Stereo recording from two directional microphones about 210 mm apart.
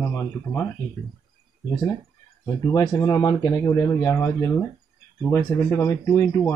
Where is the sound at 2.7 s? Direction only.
15° left (ahead or behind).